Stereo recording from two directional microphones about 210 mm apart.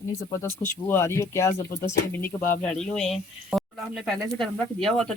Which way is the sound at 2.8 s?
Centre (ahead or behind).